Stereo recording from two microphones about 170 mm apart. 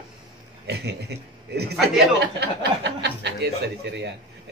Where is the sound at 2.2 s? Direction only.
85° right.